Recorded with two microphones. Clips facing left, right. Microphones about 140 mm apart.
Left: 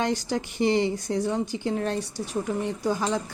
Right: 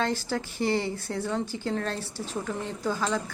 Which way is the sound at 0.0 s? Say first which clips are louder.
Left 2 dB; 15° left (ahead or behind).